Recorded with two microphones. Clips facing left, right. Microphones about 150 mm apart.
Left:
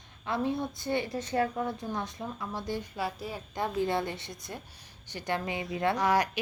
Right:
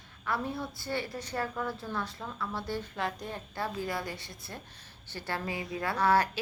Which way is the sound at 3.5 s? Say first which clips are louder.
Left 6 dB; 20° left (ahead or behind).